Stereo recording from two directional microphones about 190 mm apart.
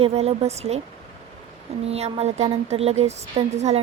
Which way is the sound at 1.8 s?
35° right (ahead or behind).